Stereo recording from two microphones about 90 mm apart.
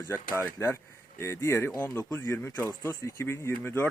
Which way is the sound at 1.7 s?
20° left (ahead or behind).